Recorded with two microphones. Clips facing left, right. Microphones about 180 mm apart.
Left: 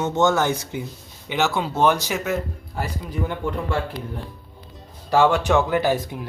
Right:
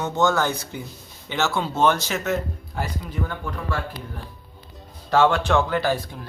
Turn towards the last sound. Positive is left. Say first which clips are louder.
# left 2 dB
turn(degrees=15)  # may be behind; listen again after turning